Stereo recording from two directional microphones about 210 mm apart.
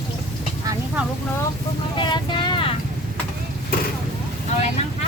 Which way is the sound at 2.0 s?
20° left (ahead or behind).